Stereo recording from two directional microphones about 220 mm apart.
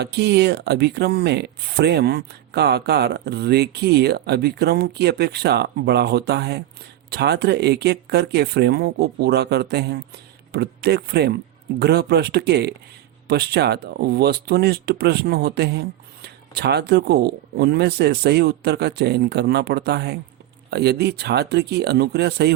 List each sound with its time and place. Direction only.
0.0 s speech: 50° right (ahead or behind)